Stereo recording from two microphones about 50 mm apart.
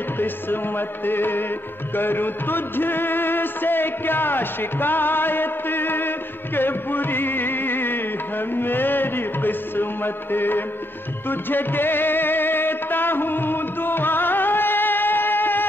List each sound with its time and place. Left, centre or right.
0.2 s music: left